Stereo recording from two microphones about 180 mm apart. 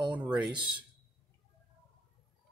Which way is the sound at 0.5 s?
25° right (ahead or behind).